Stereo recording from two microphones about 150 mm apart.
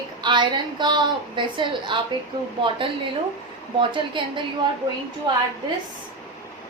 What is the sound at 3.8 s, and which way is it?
Speech, 35° right (ahead or behind).